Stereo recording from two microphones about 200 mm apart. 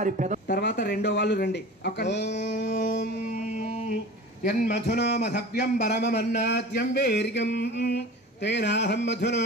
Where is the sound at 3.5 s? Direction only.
35° left (ahead or behind).